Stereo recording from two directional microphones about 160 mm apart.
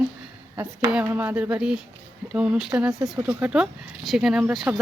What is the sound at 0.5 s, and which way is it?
Speech, 15° right (ahead or behind).